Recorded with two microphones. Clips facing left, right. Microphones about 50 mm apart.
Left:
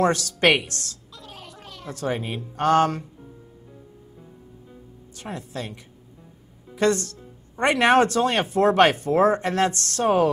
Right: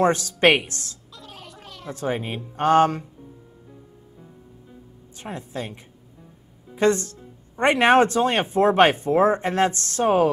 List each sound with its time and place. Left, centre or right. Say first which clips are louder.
0.0 s speech: right 2 dB; right
1.1 s gargling: even; centre
1.9 s speech: right 1 dB; right
5.1 s a woman's voice: right 1 dB; right
6.8 s speech: right 1 dB; right